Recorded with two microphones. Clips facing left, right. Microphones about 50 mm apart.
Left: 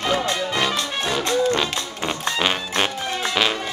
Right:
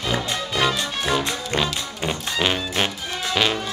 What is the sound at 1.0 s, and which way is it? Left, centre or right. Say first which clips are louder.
Music: left 5 dB; centre.